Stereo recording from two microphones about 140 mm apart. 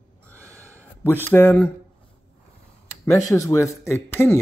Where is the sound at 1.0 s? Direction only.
15° left (ahead or behind).